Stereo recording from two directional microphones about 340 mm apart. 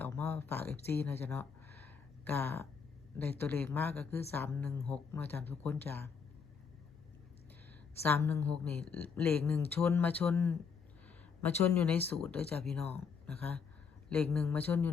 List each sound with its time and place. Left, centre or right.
0.0 s a sound: centre
0.9 s speech: centre
8.0 s speech: centre